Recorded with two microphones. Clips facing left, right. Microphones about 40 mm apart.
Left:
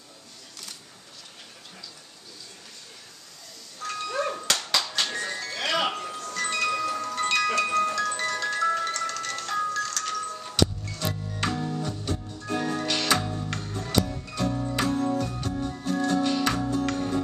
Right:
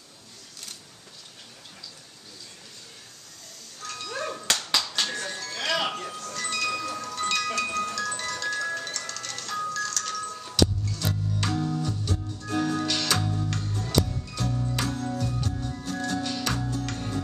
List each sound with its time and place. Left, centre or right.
3.8 s music: centre
6.1 s wind chime: centre
14.5 s music: left
14.8 s music: centre